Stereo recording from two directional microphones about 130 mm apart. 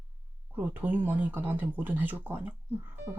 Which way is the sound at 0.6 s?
15° right (ahead or behind).